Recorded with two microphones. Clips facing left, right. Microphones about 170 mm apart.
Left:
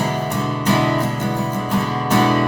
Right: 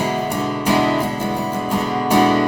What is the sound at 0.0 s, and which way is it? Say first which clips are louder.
Music: right 1 dB; 10° right (ahead or behind).